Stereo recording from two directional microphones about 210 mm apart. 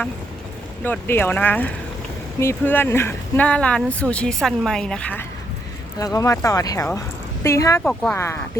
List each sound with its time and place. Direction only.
0.9 s speech: 10° left (ahead or behind)
6.0 s speech: 15° left (ahead or behind)
7.9 s speech: 5° left (ahead or behind)